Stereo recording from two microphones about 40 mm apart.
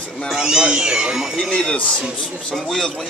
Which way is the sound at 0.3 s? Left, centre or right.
Centre.